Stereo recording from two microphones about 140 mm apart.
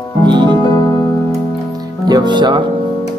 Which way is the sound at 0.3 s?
30° right (ahead or behind).